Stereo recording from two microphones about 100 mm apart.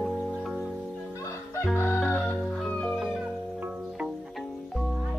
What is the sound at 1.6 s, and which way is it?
Chicken, 25° left (ahead or behind).